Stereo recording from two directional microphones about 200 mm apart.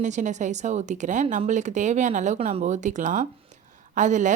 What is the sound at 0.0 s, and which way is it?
A woman's voice, 35° right (ahead or behind).